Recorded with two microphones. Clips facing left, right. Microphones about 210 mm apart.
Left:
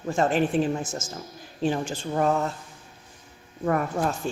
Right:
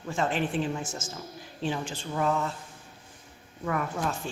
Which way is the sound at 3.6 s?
45° left (ahead or behind).